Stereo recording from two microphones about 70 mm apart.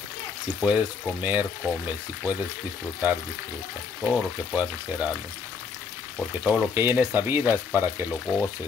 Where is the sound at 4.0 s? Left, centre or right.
Centre.